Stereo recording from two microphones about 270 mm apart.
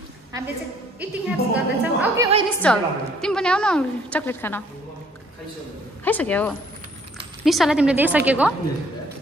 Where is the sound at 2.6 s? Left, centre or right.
Centre.